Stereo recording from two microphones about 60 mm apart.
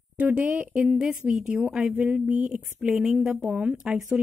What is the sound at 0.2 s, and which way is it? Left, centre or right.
Speech, right.